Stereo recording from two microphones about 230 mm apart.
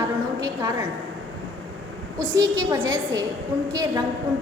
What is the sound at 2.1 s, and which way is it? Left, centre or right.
Speech, centre.